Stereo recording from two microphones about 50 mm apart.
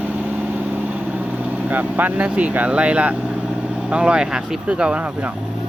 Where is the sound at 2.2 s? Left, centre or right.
Right.